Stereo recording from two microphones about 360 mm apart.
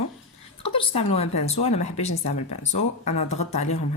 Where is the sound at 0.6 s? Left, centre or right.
Centre.